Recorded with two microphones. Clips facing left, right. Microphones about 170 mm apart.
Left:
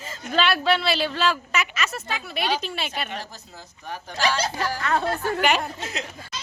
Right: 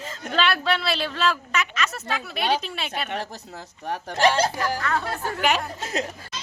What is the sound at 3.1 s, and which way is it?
Speech, 65° right (ahead or behind).